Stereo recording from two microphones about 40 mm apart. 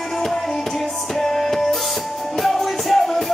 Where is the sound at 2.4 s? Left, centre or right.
Centre.